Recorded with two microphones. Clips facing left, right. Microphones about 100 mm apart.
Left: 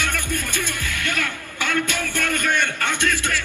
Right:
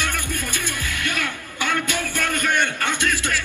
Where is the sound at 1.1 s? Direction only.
20° right (ahead or behind).